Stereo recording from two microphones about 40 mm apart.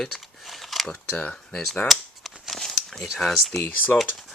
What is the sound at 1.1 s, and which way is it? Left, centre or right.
Speech, left.